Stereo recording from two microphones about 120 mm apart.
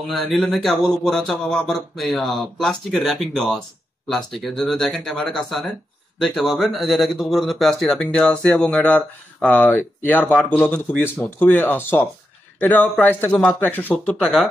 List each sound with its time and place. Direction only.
0.1 s a man's voice: centre (ahead or behind)